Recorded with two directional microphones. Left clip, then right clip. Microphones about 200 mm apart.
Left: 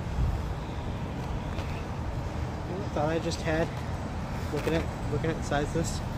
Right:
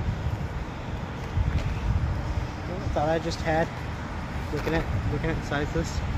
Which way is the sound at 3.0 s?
55° right (ahead or behind).